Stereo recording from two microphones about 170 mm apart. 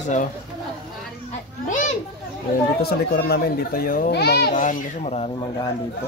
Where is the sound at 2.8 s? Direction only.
70° left (ahead or behind).